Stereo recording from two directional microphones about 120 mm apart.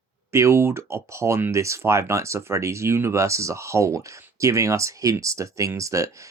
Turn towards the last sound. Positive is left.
turn(degrees=-25)  # may be behind; listen again after turning